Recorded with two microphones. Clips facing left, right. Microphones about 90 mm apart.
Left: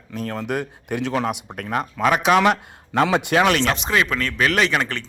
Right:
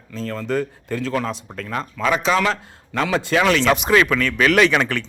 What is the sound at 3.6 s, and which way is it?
A man's voice, 10° right (ahead or behind).